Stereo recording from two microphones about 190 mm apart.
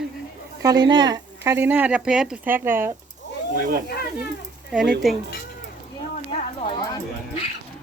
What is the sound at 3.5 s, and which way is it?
Speech, 45° right (ahead or behind).